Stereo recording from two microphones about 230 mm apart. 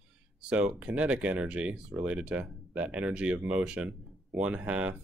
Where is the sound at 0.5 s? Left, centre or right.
Centre.